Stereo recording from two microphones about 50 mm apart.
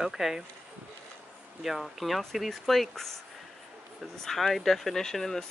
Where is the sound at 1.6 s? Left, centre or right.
Centre.